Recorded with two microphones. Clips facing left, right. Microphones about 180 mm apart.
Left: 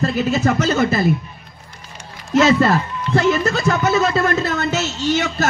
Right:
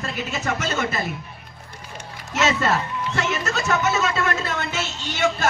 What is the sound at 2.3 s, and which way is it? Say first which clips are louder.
Speech: left 8 dB; 30° left (ahead or behind).